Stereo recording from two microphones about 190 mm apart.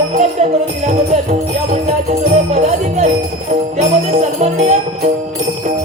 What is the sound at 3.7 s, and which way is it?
Jingle bell, 35° right (ahead or behind).